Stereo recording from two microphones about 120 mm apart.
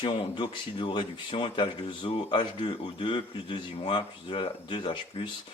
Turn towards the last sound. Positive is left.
turn(degrees=40)  # may be behind; listen again after turning